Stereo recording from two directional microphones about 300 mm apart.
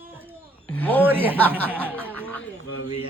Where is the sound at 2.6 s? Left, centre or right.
Left.